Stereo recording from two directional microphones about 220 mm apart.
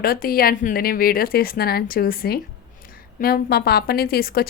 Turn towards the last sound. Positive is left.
turn(degrees=45)  # may be behind; listen again after turning